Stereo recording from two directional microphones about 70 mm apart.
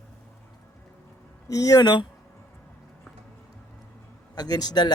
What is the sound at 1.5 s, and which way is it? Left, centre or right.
Speech, left.